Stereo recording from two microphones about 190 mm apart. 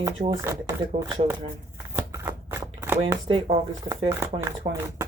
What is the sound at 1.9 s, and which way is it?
Shuffling cards, 15° right (ahead or behind).